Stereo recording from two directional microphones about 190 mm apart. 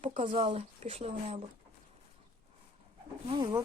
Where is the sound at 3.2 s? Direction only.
25° right (ahead or behind).